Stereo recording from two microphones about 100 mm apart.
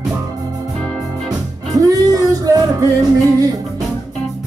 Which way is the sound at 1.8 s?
35° right (ahead or behind).